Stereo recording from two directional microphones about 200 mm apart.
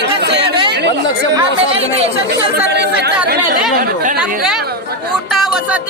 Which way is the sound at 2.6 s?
55° right (ahead or behind).